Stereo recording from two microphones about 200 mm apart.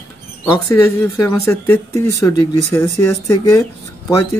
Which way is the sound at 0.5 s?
15° left (ahead or behind).